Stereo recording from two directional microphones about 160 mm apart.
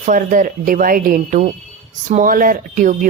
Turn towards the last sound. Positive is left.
turn(degrees=-60)  # may be behind; listen again after turning